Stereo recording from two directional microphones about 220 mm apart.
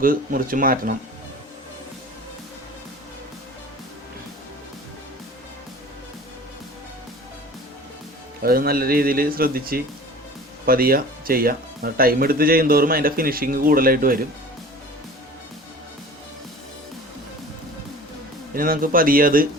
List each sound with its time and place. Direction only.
0.0 s speech: 40° right (ahead or behind)
8.4 s speech: 40° right (ahead or behind)
18.5 s speech: 40° right (ahead or behind)